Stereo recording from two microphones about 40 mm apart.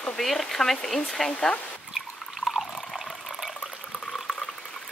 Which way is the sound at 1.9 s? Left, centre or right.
Centre.